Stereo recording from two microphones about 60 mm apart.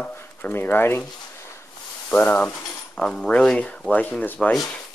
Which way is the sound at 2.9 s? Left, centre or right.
Centre.